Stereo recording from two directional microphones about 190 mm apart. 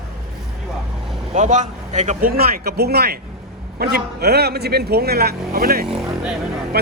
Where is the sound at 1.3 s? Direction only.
40° right (ahead or behind).